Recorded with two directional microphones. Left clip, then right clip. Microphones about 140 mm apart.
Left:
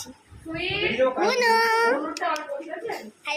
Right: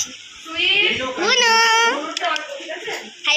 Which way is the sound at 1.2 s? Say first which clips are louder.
Right 8 dB; 5° left (ahead or behind).